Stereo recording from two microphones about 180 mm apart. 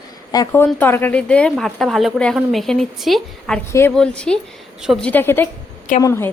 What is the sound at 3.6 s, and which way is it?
A woman's voice, 15° left (ahead or behind).